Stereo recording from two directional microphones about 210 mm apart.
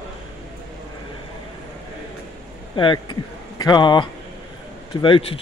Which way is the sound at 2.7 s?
25° left (ahead or behind).